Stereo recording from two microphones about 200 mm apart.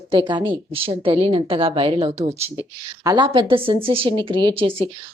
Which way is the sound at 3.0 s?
20° right (ahead or behind).